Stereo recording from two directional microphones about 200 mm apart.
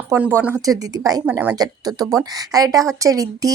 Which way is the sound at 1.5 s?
20° right (ahead or behind).